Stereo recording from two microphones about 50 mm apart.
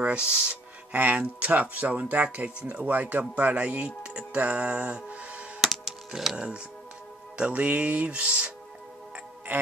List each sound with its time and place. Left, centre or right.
0.0 s speech: right
2.2 s music: right
2.8 s speech: right
5.6 s music: centre
7.3 s music: right
9.5 s music: right